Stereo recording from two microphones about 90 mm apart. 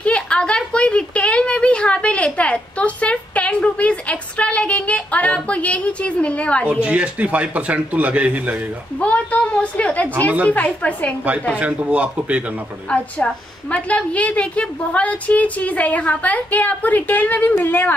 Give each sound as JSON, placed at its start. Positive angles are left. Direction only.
{"t": 0.0, "sound": "a sound", "side_deg": 15}
{"t": 6.6, "sound": "speech", "side_deg": -15}
{"t": 9.0, "sound": "a sound", "side_deg": 15}
{"t": 10.4, "sound": "a woman's voice", "side_deg": 15}
{"t": 11.5, "sound": "speech", "side_deg": -15}
{"t": 12.9, "sound": "a woman's voice", "side_deg": 15}